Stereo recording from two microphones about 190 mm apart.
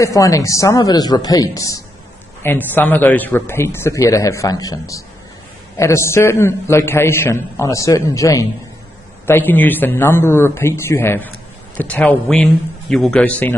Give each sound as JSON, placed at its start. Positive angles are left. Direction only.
{"t": 0.0, "sound": "a man's voice", "side_deg": 15}